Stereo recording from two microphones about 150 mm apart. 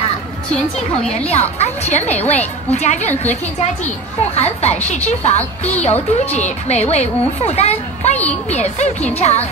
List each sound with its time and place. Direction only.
1.1 s a child's voice: 45° left (ahead or behind)
4.4 s a child's voice: 45° left (ahead or behind)